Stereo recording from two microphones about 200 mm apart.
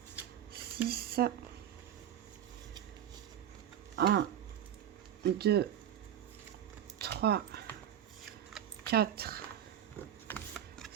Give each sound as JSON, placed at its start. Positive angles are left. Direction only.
{"t": 0.9, "sound": "speech", "side_deg": -50}
{"t": 3.9, "sound": "speech", "side_deg": -55}
{"t": 5.2, "sound": "speech", "side_deg": -55}
{"t": 7.0, "sound": "a sound", "side_deg": -50}
{"t": 8.9, "sound": "speech", "side_deg": -50}
{"t": 10.2, "sound": "a sound", "side_deg": 5}